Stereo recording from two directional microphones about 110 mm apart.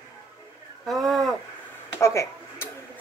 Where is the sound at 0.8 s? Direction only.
Centre (ahead or behind).